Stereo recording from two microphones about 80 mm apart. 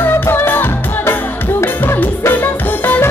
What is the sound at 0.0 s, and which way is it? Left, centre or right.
Music, left.